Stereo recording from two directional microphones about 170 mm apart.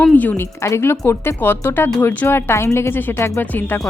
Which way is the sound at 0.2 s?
10° left (ahead or behind).